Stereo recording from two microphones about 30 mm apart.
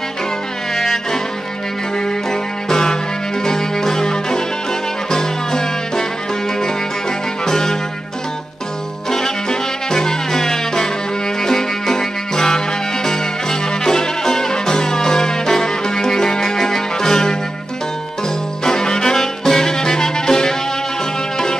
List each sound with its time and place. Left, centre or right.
0.7 s music: centre
2.7 s music: left
7.4 s music: centre
9.1 s music: left
18.6 s music: left